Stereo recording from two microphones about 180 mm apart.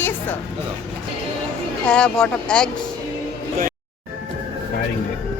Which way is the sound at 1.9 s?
5° left (ahead or behind).